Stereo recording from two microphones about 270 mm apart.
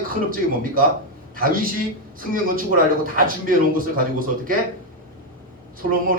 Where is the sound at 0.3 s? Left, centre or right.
Right.